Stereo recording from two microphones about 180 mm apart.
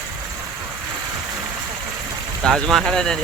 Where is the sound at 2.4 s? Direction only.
5° left (ahead or behind).